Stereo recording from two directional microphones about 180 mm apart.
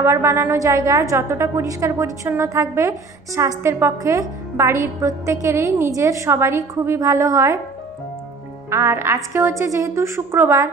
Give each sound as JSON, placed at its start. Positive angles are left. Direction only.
{"t": 0.0, "sound": "a woman's voice", "side_deg": -15}
{"t": 8.6, "sound": "a woman's voice", "side_deg": -15}